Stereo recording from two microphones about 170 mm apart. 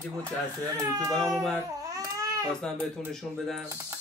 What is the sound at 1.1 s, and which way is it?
Speech, centre (ahead or behind).